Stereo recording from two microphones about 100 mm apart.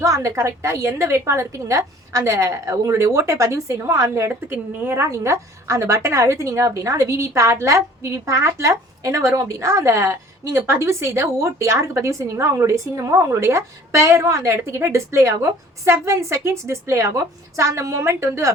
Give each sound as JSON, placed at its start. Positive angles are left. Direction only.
{"t": 0.0, "sound": "a woman's voice", "side_deg": -30}